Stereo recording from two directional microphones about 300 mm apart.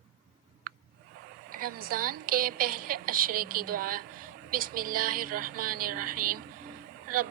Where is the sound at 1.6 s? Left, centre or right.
Right.